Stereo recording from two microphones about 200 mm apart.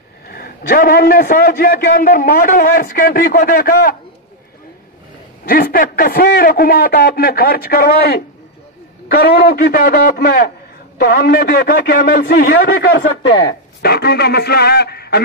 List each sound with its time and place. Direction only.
0.3 s a man's voice: 45° left (ahead or behind)
5.4 s a man's voice: 50° left (ahead or behind)
13.3 s speech: 25° left (ahead or behind)
13.8 s a man's voice: 55° left (ahead or behind)